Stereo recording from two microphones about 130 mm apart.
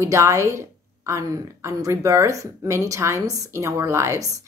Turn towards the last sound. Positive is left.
turn(degrees=-20)  # may be behind; listen again after turning